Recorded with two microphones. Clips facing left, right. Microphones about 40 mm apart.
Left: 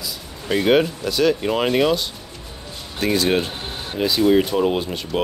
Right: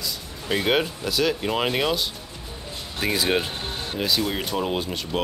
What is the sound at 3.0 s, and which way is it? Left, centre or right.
Speech, centre.